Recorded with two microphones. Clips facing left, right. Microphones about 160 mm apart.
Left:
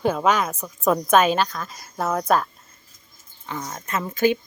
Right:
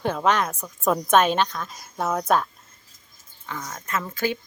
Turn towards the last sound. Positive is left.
turn(degrees=20)  # may be behind; listen again after turning